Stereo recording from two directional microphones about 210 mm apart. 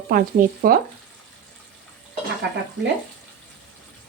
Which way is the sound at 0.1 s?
40° right (ahead or behind).